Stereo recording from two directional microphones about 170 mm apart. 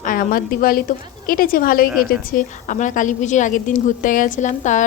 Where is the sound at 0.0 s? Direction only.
55° left (ahead or behind).